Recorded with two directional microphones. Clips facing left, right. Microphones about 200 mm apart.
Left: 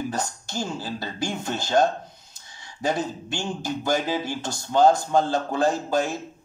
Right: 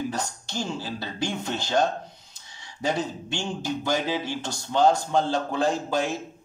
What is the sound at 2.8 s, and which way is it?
Speech, 45° left (ahead or behind).